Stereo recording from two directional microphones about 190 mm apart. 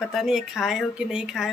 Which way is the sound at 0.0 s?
Centre (ahead or behind).